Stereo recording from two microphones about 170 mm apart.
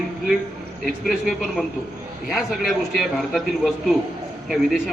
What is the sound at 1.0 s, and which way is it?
A man's voice, centre (ahead or behind).